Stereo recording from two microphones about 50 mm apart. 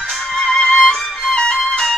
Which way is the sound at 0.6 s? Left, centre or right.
Centre.